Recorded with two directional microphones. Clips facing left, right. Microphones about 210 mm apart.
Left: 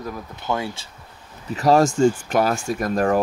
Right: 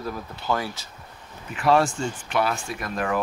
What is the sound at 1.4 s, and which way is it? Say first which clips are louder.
Speech: left 4 dB; 40° left (ahead or behind).